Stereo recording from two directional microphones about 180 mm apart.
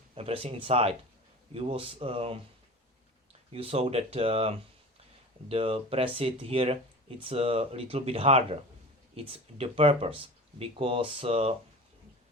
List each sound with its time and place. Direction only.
0.1 s speech: 35° right (ahead or behind)
3.5 s speech: 30° right (ahead or behind)